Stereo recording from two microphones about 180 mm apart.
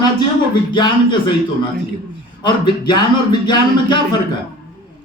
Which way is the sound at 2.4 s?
25° left (ahead or behind).